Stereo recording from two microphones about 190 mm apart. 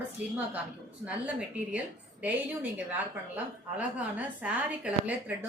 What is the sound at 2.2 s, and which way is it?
A woman's voice, 10° right (ahead or behind).